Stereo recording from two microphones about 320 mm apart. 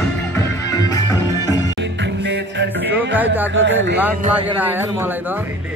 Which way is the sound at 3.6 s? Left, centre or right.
Right.